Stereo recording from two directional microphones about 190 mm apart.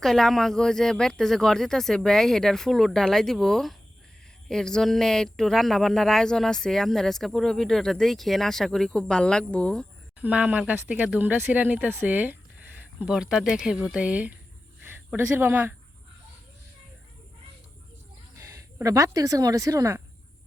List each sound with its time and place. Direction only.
0.0 s speech: centre (ahead or behind)
10.2 s speech: 5° right (ahead or behind)
14.8 s a sound: 10° right (ahead or behind)
18.3 s speech: 15° right (ahead or behind)